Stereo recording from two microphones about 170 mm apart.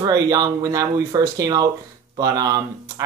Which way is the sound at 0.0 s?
25° right (ahead or behind).